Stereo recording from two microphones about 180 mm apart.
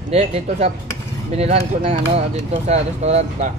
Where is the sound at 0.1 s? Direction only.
35° right (ahead or behind).